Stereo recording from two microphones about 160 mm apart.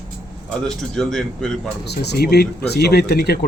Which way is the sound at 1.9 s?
85° left.